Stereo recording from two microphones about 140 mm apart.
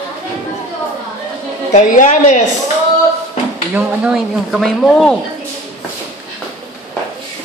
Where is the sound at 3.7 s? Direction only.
5° right (ahead or behind).